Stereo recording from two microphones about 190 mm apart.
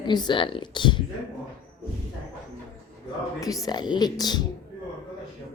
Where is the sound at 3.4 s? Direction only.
20° left (ahead or behind).